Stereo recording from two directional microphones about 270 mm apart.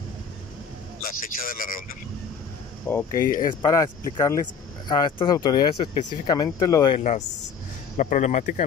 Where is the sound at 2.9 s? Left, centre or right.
Centre.